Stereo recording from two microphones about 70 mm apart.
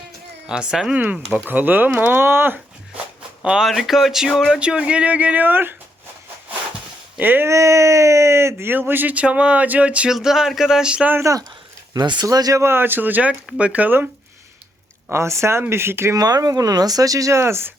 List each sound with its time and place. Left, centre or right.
0.4 s speech: centre
0.9 s speech: right
3.4 s speech: centre
4.6 s speech: centre; by 5.7 s right
7.2 s speech: right
7.4 s speech: right
8.7 s speech: right
10.1 s speech: centre
11.9 s speech: right
12.6 s speech: right
15.1 s speech: right
16.1 s speech: right
17.4 s speech: right